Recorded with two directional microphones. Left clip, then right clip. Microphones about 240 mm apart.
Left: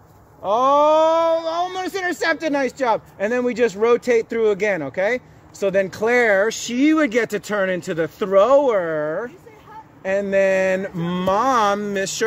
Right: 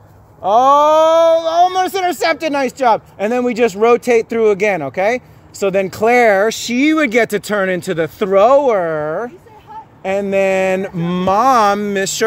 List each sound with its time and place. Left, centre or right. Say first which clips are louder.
0.4 s speech: right 6 dB; right